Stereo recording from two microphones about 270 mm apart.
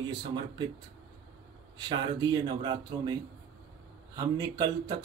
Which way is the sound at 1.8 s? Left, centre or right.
Centre.